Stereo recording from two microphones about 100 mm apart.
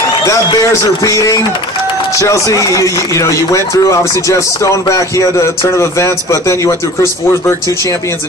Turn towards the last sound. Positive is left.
turn(degrees=30)  # may be behind; listen again after turning